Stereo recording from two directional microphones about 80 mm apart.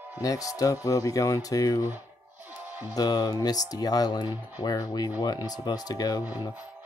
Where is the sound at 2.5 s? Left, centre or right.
Right.